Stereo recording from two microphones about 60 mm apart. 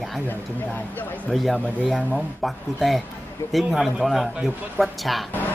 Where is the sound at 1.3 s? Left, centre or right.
Centre.